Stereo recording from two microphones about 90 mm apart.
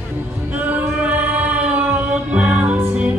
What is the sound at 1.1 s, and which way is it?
Music, 20° right (ahead or behind).